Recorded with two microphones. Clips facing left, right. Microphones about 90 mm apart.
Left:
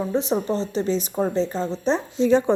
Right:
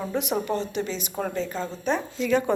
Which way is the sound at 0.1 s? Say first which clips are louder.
Left 1 dB; 30° left (ahead or behind).